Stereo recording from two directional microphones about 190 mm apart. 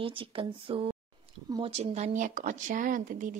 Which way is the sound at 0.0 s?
30° right (ahead or behind).